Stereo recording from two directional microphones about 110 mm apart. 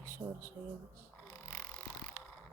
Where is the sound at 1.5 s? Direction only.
20° left (ahead or behind).